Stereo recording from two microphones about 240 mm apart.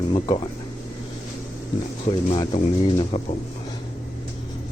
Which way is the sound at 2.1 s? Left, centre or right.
Left.